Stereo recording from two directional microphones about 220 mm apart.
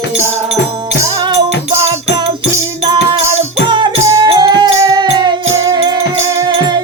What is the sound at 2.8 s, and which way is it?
Music, 30° right (ahead or behind).